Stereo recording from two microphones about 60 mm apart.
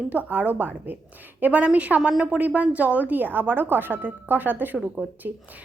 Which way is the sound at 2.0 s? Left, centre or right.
Centre.